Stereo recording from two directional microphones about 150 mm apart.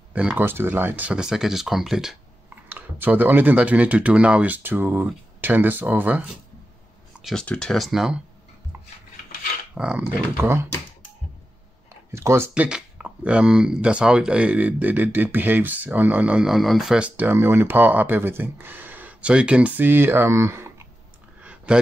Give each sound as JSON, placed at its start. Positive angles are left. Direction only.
{"t": 0.1, "sound": "speech", "side_deg": -10}
{"t": 7.2, "sound": "a sound", "side_deg": 0}
{"t": 7.4, "sound": "speech", "side_deg": 5}
{"t": 9.8, "sound": "speech", "side_deg": -5}
{"t": 12.1, "sound": "speech", "side_deg": -20}
{"t": 12.6, "sound": "speech", "side_deg": -5}
{"t": 21.4, "sound": "clicking", "side_deg": -10}